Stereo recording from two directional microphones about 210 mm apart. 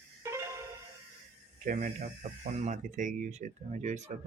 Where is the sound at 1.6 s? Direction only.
40° right (ahead or behind).